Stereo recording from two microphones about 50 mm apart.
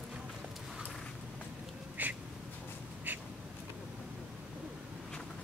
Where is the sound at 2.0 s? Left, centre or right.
Right.